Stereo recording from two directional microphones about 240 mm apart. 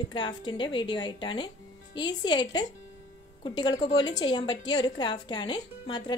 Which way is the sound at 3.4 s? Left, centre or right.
Centre.